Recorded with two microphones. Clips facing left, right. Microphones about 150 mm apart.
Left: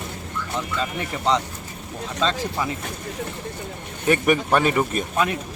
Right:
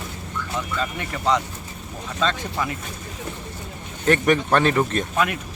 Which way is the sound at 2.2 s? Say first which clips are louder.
Even; 30° left (ahead or behind).